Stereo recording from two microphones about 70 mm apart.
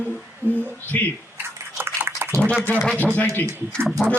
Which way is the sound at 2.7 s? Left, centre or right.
Left.